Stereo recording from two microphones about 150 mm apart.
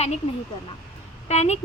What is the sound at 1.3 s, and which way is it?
Speech, 45° left (ahead or behind).